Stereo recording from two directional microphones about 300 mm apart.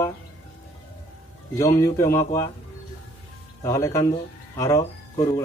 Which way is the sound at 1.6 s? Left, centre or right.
Centre.